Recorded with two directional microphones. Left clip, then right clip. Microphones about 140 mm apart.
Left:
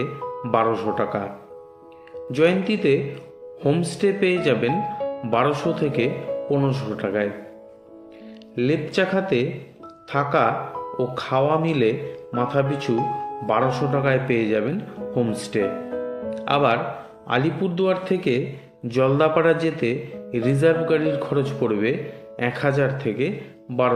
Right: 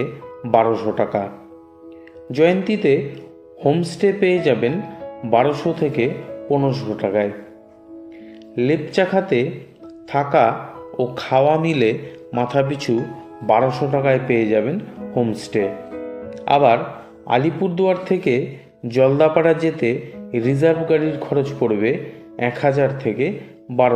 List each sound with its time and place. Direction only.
0.0 s speech: 25° right (ahead or behind)
2.3 s speech: 25° right (ahead or behind)
8.5 s speech: 25° right (ahead or behind)